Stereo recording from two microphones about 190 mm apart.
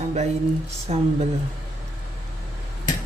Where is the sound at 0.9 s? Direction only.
35° right (ahead or behind).